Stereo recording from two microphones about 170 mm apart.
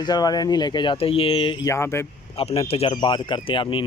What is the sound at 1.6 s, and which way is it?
Speech, 15° left (ahead or behind).